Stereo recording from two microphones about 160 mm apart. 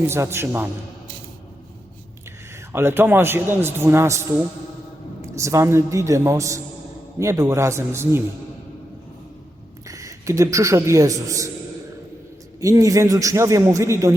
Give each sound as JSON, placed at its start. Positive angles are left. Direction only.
{"t": 0.1, "sound": "a man's voice", "side_deg": -15}
{"t": 2.7, "sound": "a man's voice", "side_deg": -15}
{"t": 9.8, "sound": "a man's voice", "side_deg": -20}
{"t": 12.5, "sound": "a man's voice", "side_deg": -20}